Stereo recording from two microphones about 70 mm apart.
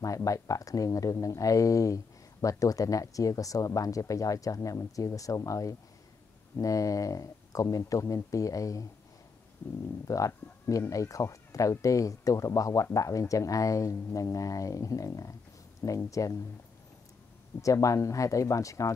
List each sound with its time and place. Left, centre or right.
0.0 s speech: left
9.6 s speech: left
10.0 s speech: left
17.6 s speech: left